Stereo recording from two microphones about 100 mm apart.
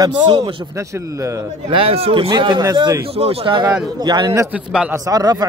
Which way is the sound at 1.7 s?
65° right (ahead or behind).